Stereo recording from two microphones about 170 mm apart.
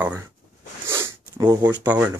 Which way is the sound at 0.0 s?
10° right (ahead or behind).